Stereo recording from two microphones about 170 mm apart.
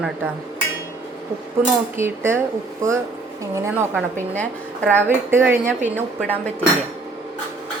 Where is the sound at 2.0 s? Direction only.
15° right (ahead or behind).